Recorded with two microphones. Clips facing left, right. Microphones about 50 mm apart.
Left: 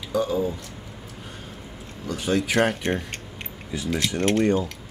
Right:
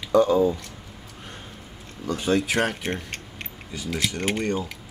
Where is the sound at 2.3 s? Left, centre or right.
Centre.